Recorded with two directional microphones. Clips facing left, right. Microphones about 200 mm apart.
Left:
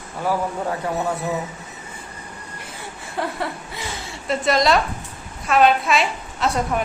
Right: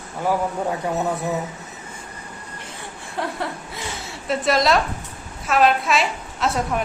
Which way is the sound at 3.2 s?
Centre (ahead or behind).